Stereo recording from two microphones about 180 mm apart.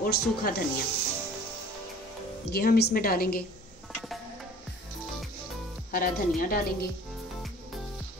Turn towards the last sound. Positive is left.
turn(degrees=50)  # may be behind; listen again after turning